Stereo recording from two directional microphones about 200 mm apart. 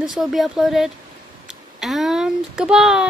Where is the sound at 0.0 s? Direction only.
Centre (ahead or behind).